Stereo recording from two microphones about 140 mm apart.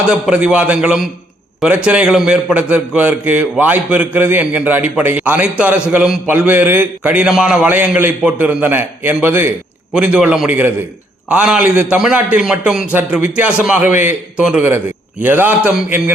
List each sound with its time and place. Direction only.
0.1 s a man's voice: 5° right (ahead or behind)